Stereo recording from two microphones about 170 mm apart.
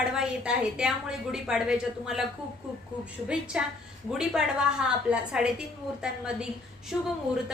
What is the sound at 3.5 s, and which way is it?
A woman's voice, 5° right (ahead or behind).